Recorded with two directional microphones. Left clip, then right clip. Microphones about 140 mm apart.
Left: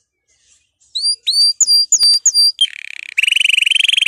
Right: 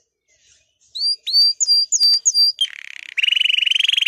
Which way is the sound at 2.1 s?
40° right (ahead or behind).